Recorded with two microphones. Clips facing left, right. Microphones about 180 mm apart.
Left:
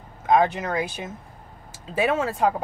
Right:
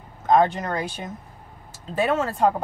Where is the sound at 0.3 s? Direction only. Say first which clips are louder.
Right 1 dB; 5° left (ahead or behind).